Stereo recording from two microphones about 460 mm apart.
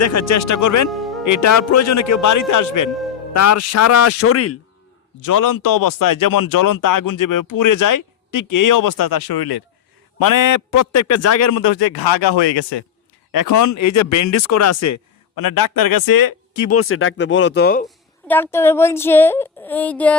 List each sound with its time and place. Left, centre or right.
0.0 s speech: left
0.9 s music: centre
1.2 s speech: left
5.2 s speech: left
13.3 s speech: left
16.6 s speech: left
17.8 s speech: centre